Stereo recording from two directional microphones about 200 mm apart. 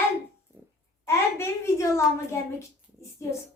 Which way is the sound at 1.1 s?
15° left (ahead or behind).